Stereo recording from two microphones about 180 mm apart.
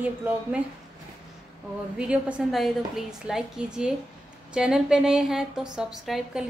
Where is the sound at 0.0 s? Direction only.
10° right (ahead or behind).